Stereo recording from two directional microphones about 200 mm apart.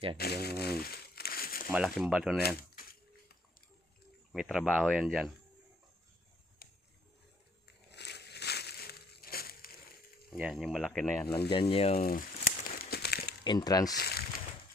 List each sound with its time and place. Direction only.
0.2 s crumpling: 50° left (ahead or behind)
1.7 s speech: centre (ahead or behind)
4.3 s speech: centre (ahead or behind)
6.6 s a sound: 50° left (ahead or behind)
7.9 s crushing: 55° left (ahead or behind)
10.2 s speech: 5° right (ahead or behind)
11.7 s speech: 30° left (ahead or behind)
12.0 s crumpling: 45° left (ahead or behind)
13.4 s speech: 20° left (ahead or behind)
13.9 s a sound: 50° left (ahead or behind)